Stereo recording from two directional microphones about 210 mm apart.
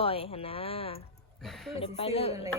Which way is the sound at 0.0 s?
25° left (ahead or behind).